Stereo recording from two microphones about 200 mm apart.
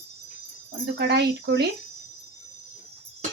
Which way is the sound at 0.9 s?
55° right (ahead or behind).